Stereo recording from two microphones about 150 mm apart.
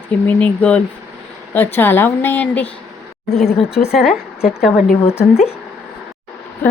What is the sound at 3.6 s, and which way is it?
Speech, 40° left (ahead or behind).